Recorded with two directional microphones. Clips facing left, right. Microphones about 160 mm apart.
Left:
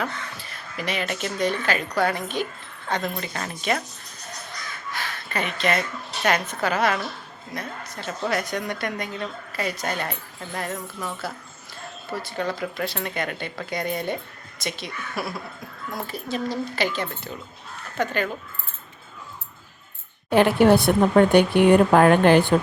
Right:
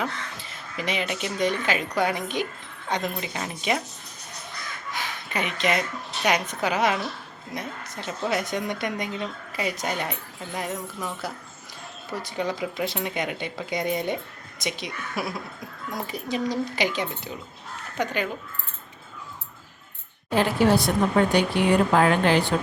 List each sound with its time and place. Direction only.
0.0 s a woman's voice: 20° right (ahead or behind)
4.9 s a sound: 20° right (ahead or behind)
6.2 s a woman's voice: 15° right (ahead or behind)
20.3 s speech: 60° left (ahead or behind)